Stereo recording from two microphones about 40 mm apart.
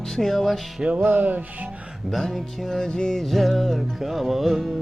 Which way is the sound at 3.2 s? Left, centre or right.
Centre.